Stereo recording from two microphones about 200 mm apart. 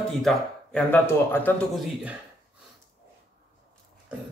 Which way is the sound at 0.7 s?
10° left (ahead or behind).